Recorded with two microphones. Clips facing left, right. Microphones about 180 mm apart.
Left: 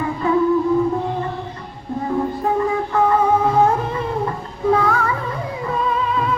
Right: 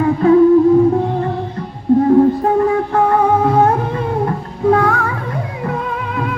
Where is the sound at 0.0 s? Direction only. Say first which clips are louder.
Right 9 dB; 65° right (ahead or behind).